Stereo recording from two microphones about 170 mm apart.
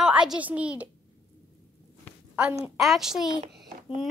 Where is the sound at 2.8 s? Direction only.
Centre (ahead or behind).